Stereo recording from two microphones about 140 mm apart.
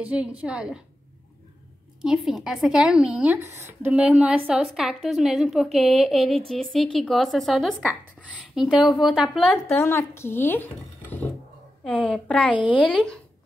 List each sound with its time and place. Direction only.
0.0 s a woman's voice: 10° right (ahead or behind)
2.0 s a woman's voice: 5° right (ahead or behind)
9.7 s a woman's voice: 15° left (ahead or behind)